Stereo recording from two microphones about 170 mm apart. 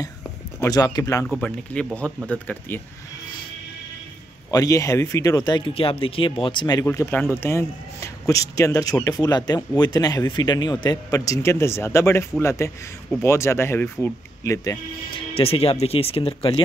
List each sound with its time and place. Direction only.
0.6 s speech: 20° left (ahead or behind)
1.3 s a man's voice: 5° left (ahead or behind)
4.5 s speech: 20° left (ahead or behind)
6.9 s a man's voice: 10° left (ahead or behind)
15.3 s speech: 35° left (ahead or behind)